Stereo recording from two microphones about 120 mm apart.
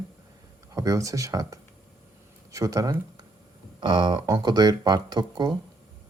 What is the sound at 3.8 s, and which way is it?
Speech, 40° right (ahead or behind).